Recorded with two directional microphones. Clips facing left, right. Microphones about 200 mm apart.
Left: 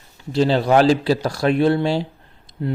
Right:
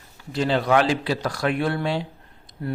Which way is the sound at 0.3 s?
30° left (ahead or behind).